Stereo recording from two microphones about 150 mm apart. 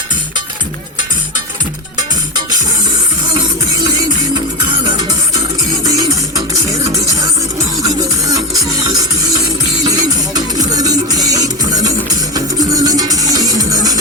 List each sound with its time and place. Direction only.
3.9 s music: 30° right (ahead or behind)